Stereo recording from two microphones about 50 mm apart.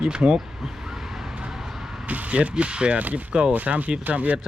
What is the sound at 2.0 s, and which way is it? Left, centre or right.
Speech, right.